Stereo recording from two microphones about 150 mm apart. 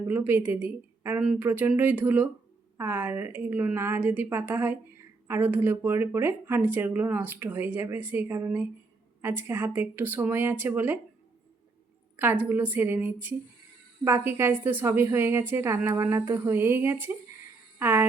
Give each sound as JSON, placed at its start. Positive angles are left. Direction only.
{"t": 0.1, "sound": "speech", "side_deg": -15}
{"t": 12.1, "sound": "speech", "side_deg": -15}